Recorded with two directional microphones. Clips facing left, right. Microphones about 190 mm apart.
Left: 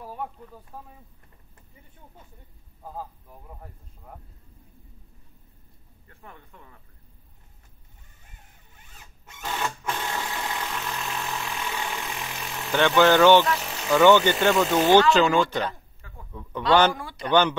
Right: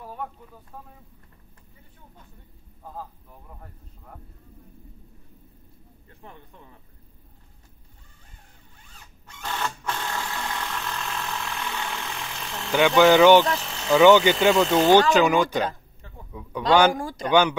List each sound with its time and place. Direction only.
0.0 s a sound: 5° left (ahead or behind)
2.8 s speech: 10° left (ahead or behind)
6.0 s speech: 20° right (ahead or behind)
9.3 s a sound: 15° left (ahead or behind)
12.7 s speech: 10° right (ahead or behind)
13.6 s vehicle: 10° left (ahead or behind)
13.9 s speech: 10° right (ahead or behind)
14.6 s speech: 5° left (ahead or behind)
15.1 s a sound: 15° right (ahead or behind)
16.3 s a man's voice: 10° right (ahead or behind)
16.9 s speech: 45° right (ahead or behind)
17.3 s speech: 10° right (ahead or behind)